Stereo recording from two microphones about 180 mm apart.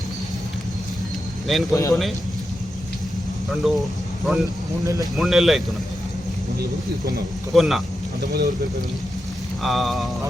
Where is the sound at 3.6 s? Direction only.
Centre (ahead or behind).